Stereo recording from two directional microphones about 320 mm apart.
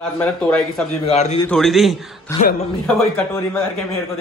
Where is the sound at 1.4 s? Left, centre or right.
Centre.